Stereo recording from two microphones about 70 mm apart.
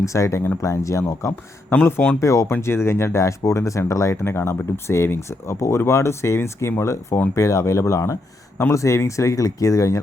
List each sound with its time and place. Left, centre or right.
0.0 s speech: left
2.6 s speech: left